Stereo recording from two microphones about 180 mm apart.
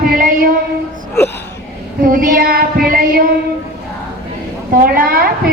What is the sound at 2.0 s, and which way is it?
A woman's voice, 50° right (ahead or behind).